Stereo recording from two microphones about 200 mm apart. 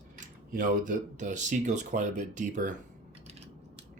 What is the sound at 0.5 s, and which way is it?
Speech, 40° right (ahead or behind).